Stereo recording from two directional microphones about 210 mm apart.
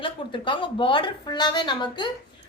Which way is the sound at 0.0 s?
25° left (ahead or behind).